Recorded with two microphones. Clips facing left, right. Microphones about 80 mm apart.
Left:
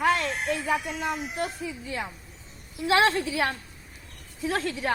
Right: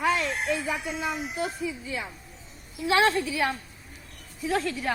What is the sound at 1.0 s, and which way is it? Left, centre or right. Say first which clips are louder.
Speech: even; left.